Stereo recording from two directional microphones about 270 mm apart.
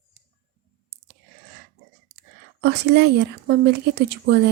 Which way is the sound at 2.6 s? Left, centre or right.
Right.